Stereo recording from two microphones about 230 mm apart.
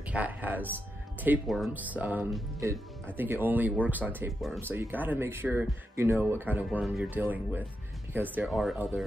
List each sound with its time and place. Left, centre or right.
0.1 s speech: centre